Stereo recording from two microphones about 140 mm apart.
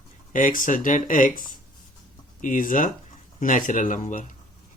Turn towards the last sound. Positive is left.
turn(degrees=65)  # may be behind; listen again after turning